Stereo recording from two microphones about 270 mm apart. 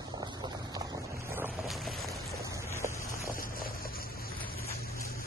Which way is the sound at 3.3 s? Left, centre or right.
Left.